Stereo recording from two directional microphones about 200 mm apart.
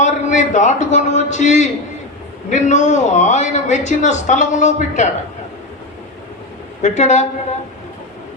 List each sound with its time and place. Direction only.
0.0 s a man's voice: 35° left (ahead or behind)
6.8 s a man's voice: 35° left (ahead or behind)